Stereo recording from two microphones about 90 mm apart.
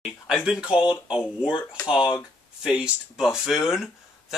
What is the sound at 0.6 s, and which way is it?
Speech, 55° left (ahead or behind).